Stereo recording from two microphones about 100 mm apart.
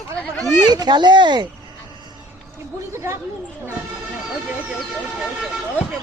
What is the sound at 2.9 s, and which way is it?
Speech, 25° right (ahead or behind).